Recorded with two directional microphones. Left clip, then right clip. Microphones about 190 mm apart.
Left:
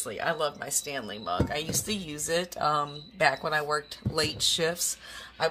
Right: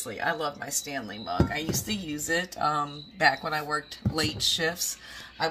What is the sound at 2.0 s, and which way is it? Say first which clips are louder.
Speech: right 3 dB; 25° left (ahead or behind).